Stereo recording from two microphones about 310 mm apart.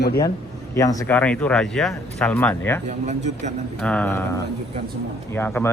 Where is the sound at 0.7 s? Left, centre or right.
Centre.